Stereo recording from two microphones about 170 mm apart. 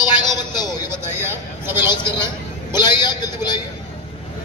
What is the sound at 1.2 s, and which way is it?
Vehicle, 15° right (ahead or behind).